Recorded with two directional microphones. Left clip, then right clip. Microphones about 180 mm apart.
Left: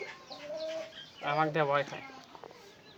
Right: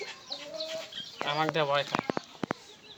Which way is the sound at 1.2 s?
25° left (ahead or behind).